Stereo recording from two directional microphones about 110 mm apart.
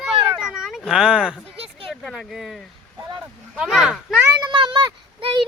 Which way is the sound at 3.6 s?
5° right (ahead or behind).